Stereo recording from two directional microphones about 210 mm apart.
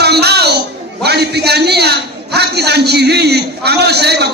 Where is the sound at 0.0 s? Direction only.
50° right (ahead or behind).